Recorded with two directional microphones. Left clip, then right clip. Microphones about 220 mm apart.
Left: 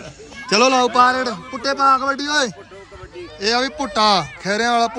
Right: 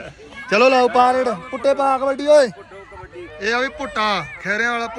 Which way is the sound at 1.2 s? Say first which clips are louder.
Right 3 dB; 30° right (ahead or behind).